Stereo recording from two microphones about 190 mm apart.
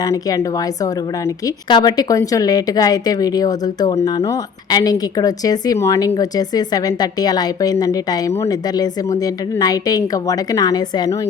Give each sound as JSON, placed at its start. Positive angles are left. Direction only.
{"t": 0.0, "sound": "speech", "side_deg": 20}
{"t": 1.7, "sound": "a woman's voice", "side_deg": 20}